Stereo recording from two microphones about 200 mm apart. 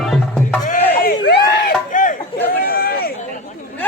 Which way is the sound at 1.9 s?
40° left (ahead or behind).